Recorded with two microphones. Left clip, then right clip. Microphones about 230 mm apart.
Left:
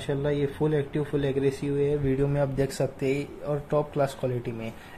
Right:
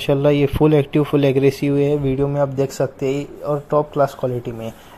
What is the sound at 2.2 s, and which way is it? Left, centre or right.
Speech, centre.